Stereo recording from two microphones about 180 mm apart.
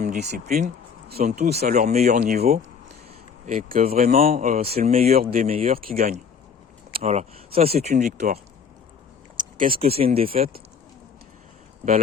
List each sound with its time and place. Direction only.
0.0 s speech: 45° right (ahead or behind)
2.4 s a sound: 35° right (ahead or behind)
3.4 s speech: 45° right (ahead or behind)
5.1 s speech: 50° right (ahead or behind)
7.0 s speech: 35° right (ahead or behind)
8.0 s speech: 60° right (ahead or behind)
9.4 s a sound: 45° right (ahead or behind)
9.8 s speech: 35° right (ahead or behind)